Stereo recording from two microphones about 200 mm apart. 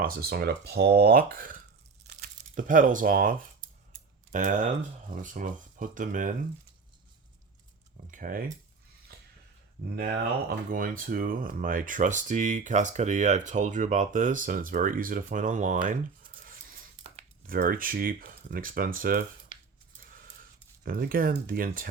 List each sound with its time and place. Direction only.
0.0 s speech: 50° right (ahead or behind)
8.1 s speech: 45° right (ahead or behind)
10.7 s speech: 45° right (ahead or behind)
16.4 s a sound: 45° right (ahead or behind)
17.4 s speech: 45° right (ahead or behind)
20.0 s a sound: 45° right (ahead or behind)
20.8 s speech: 45° right (ahead or behind)